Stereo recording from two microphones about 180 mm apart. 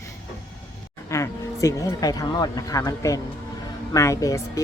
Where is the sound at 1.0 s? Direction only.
15° left (ahead or behind).